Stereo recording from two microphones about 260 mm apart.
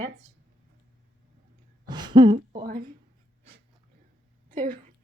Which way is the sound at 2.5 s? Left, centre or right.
Right.